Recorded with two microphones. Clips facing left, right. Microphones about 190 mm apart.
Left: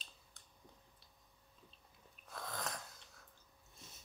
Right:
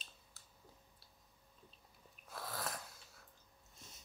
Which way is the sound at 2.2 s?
5° right (ahead or behind).